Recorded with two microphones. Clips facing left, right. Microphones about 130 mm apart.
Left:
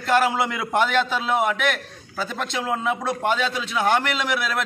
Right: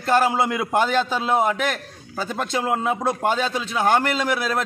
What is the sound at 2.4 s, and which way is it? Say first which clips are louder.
A man's voice: right 4 dB; 40° right (ahead or behind).